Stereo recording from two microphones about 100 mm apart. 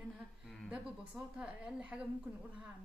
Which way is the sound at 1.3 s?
10° right (ahead or behind).